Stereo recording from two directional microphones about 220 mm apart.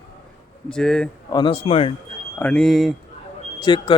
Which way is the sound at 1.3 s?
20° left (ahead or behind).